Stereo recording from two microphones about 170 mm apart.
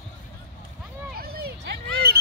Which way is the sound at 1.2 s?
65° right (ahead or behind).